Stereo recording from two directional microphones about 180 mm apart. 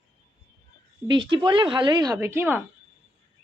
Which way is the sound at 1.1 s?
25° right (ahead or behind).